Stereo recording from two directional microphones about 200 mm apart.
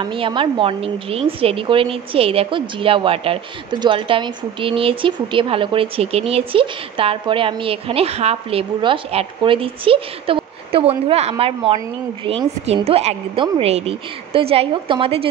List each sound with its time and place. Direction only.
0.0 s speech: 25° right (ahead or behind)